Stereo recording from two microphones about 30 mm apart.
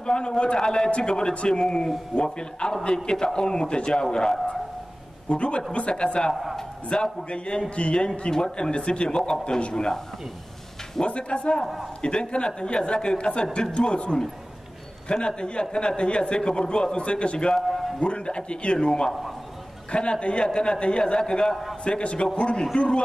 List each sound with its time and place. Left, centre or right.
0.0 s a man's voice: left
5.3 s a man's voice: left
11.1 s a man's voice: left
17.6 s a sound: centre
18.0 s a man's voice: left